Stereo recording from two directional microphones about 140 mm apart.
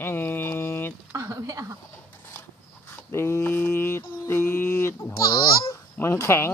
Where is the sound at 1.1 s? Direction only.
25° right (ahead or behind).